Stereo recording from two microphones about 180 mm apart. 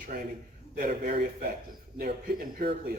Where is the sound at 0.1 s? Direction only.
50° right (ahead or behind).